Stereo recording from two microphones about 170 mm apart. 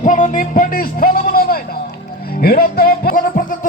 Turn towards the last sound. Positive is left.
turn(degrees=60)  # may be behind; listen again after turning